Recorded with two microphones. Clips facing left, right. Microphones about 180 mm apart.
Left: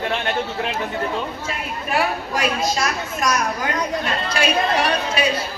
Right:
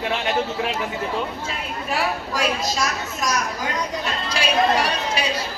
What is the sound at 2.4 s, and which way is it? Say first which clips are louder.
A woman's voice: left 2 dB; 55° left (ahead or behind).